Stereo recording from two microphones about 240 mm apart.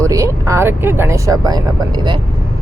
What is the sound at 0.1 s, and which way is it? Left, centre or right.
Speech, centre.